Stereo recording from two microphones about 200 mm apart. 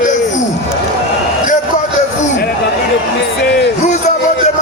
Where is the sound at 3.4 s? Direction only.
60° left (ahead or behind).